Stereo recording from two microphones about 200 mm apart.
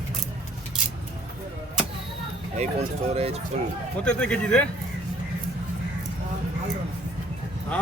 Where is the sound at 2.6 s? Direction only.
30° right (ahead or behind).